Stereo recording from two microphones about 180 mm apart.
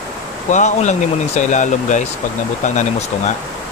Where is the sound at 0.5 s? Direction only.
40° left (ahead or behind).